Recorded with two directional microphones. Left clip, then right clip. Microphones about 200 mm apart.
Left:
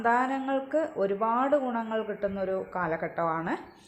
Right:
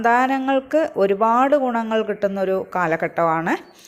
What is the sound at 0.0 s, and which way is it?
A woman's voice, 30° right (ahead or behind).